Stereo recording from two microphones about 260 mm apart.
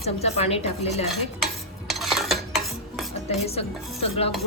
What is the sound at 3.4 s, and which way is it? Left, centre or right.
Dishes, left.